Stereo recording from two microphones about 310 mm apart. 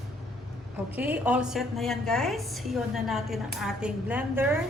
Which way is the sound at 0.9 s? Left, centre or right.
Centre.